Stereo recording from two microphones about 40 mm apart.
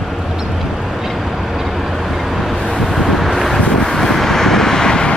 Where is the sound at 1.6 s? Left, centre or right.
Centre.